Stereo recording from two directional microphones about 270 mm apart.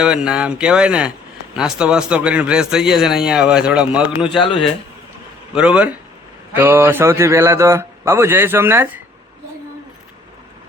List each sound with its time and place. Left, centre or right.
0.0 s speech: centre
4.3 s speech: centre
5.5 s speech: centre